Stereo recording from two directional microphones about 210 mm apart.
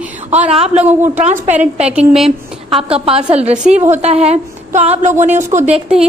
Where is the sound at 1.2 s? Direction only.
35° right (ahead or behind).